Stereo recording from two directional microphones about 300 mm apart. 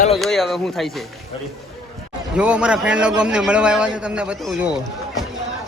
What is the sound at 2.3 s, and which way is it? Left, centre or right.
A man's voice, centre.